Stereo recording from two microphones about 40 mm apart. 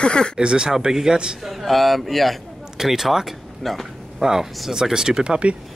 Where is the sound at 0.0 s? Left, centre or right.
Left.